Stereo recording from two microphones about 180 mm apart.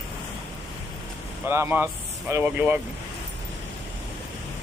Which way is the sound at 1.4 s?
15° right (ahead or behind).